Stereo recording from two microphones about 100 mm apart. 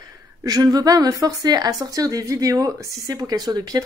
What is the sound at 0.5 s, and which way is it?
A woman's voice, 40° right (ahead or behind).